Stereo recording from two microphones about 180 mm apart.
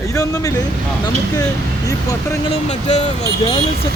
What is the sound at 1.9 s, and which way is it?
Speech, 20° left (ahead or behind).